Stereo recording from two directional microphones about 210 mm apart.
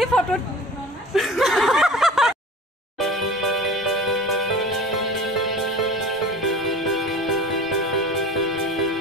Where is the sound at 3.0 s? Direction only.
Centre (ahead or behind).